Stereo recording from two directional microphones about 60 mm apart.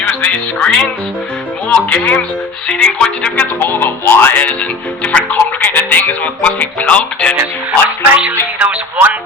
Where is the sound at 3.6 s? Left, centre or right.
Left.